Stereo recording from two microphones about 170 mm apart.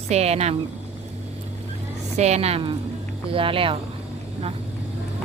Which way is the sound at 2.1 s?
40° right (ahead or behind).